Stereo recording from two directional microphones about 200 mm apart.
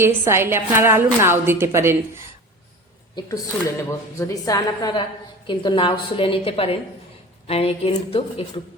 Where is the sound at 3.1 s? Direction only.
15° left (ahead or behind).